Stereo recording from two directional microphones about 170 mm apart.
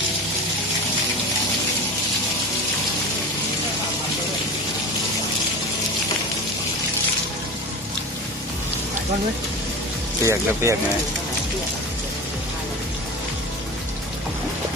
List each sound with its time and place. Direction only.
10.2 s speech: 15° right (ahead or behind)